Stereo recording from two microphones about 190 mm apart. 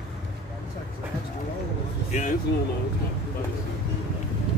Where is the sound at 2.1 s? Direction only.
40° left (ahead or behind).